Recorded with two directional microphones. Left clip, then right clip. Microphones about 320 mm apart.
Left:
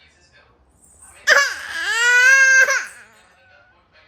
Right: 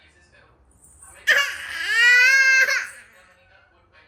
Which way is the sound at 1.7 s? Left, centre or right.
Centre.